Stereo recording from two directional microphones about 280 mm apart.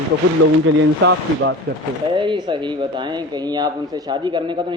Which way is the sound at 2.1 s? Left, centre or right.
Centre.